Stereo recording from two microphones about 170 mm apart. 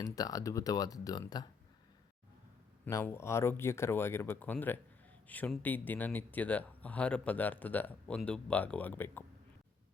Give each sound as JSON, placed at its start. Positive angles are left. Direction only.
{"t": 0.0, "sound": "speech", "side_deg": 20}
{"t": 2.8, "sound": "speech", "side_deg": 15}